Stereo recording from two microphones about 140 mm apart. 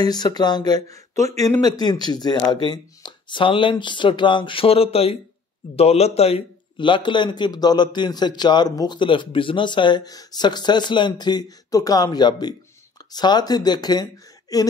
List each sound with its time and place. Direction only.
0.0 s a man's voice: 30° left (ahead or behind)